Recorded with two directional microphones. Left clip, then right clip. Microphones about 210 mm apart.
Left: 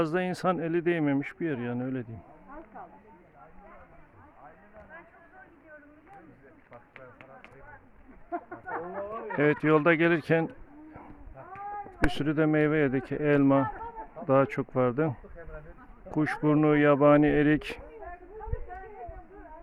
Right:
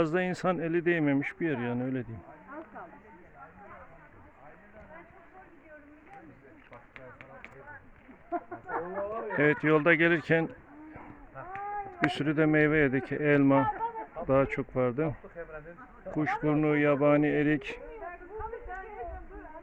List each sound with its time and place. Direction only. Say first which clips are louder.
0.0 s speech: left 1 dB; 5° left (ahead or behind)
6.9 s a sound: right 1 dB; 40° left (ahead or behind)
8.3 s chicken: right 1 dB; 30° left (ahead or behind)
9.4 s speech: left 1 dB; 15° left (ahead or behind)
12.1 s speech: even; 10° left (ahead or behind)